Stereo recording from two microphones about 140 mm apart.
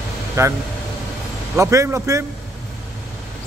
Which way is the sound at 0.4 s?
20° right (ahead or behind).